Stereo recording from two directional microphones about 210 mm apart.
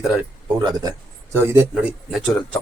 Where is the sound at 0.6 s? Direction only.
20° right (ahead or behind).